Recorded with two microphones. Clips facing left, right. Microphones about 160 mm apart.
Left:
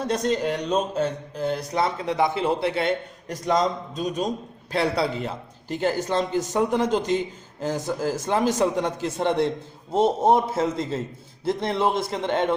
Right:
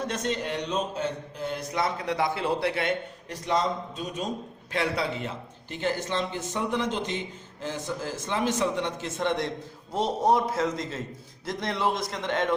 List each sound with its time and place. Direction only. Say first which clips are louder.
0.0 s a man's voice: left 6 dB; 35° left (ahead or behind)
3.2 s a man's voice: left 4 dB; 45° left (ahead or behind)